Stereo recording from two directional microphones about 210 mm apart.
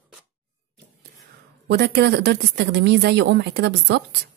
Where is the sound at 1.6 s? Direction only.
50° right (ahead or behind).